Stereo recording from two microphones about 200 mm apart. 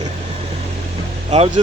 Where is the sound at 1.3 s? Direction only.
30° right (ahead or behind).